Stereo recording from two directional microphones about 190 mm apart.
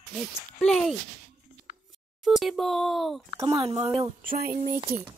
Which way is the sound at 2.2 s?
Centre (ahead or behind).